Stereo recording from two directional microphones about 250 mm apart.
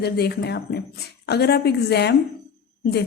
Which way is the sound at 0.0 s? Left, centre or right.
Left.